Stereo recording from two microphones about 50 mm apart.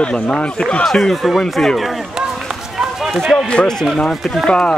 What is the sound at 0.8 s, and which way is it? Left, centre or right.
Speech, centre.